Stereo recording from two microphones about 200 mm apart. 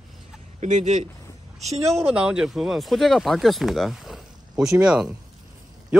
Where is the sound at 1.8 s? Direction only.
10° right (ahead or behind).